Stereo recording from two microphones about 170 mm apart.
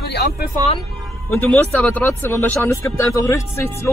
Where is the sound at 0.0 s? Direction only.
70° left (ahead or behind).